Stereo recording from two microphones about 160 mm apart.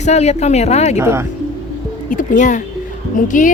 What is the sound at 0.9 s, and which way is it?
Speech, 15° right (ahead or behind).